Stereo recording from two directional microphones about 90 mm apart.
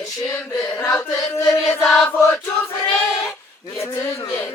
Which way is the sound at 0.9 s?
40° left (ahead or behind).